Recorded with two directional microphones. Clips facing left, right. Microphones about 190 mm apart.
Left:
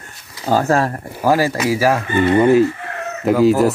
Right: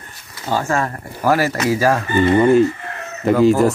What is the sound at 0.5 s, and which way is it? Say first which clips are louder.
Speech: left 4 dB; 40° left (ahead or behind).